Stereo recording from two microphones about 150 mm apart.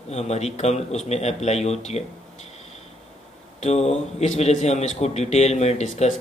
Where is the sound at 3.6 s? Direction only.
45° left (ahead or behind).